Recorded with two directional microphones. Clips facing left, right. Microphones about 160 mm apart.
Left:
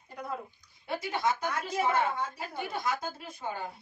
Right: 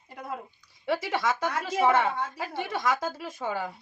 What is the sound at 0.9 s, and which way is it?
Speech, 90° right.